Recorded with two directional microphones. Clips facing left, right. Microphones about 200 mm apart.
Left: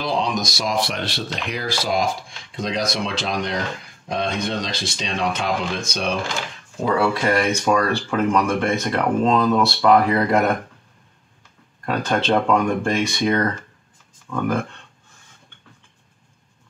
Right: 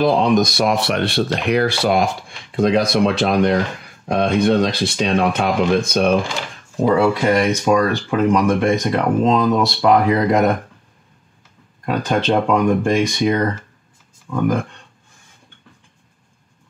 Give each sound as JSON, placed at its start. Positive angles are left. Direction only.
{"t": 0.0, "sound": "speech", "side_deg": -55}
{"t": 6.9, "sound": "speech", "side_deg": -20}
{"t": 11.8, "sound": "speech", "side_deg": -15}